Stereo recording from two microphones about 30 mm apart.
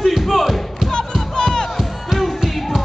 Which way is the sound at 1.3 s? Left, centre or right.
Left.